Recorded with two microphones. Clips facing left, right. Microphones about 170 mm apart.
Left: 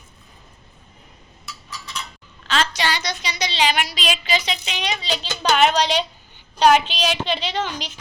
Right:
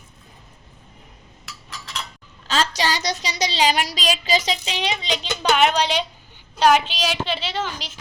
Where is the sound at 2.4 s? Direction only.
40° right (ahead or behind).